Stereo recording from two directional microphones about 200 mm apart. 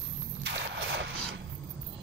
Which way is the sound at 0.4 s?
60° right (ahead or behind).